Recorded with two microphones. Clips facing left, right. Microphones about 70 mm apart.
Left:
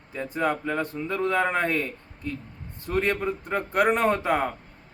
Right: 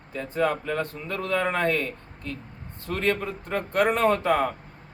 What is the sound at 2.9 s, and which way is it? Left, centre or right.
A man's voice, centre.